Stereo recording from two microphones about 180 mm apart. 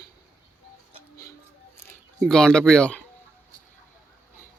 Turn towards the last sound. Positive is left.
turn(degrees=5)  # may be behind; listen again after turning